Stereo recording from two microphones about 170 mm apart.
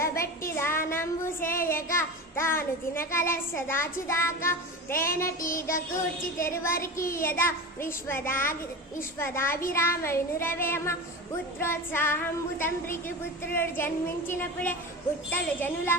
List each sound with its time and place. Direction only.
0.2 s child singing: 15° left (ahead or behind)